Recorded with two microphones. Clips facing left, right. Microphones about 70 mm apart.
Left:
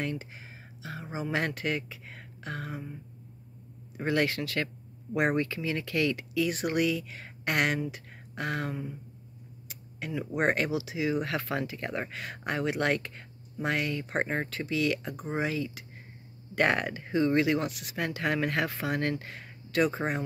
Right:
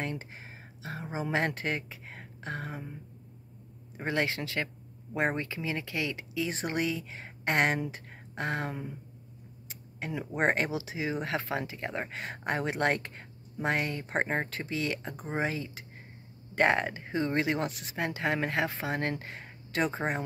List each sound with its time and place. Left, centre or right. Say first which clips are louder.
0.8 s speech: even; right
3.9 s speech: left 3 dB; right